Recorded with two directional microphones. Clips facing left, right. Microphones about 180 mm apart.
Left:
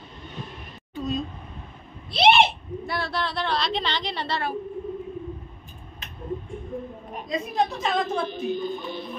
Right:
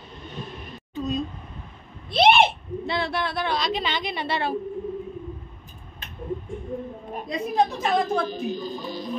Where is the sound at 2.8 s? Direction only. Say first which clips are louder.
Right 3 dB; 20° right (ahead or behind).